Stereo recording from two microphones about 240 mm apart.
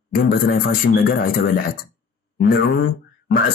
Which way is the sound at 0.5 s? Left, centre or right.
Left.